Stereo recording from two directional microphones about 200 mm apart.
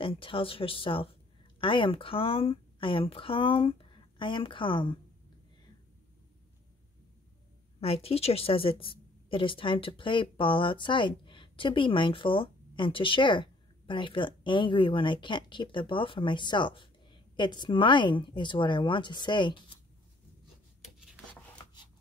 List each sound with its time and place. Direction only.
0.0 s a woman's voice: 25° left (ahead or behind)
7.8 s a woman's voice: 30° left (ahead or behind)
20.8 s rub: centre (ahead or behind)